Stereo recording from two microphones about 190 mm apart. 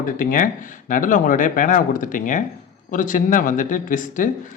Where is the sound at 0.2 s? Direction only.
45° left (ahead or behind).